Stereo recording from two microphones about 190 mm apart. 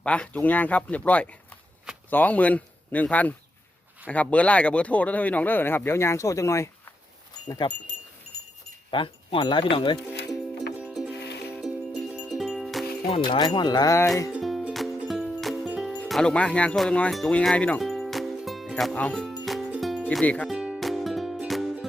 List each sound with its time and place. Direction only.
0.0 s speech: 5° left (ahead or behind)
7.6 s speech: 25° left (ahead or behind)
8.9 s speech: 25° left (ahead or behind)
10.8 s music: 5° right (ahead or behind)
13.1 s speech: 30° left (ahead or behind)
14.3 s music: 5° right (ahead or behind)
20.1 s speech: 5° left (ahead or behind)
20.5 s music: 5° right (ahead or behind)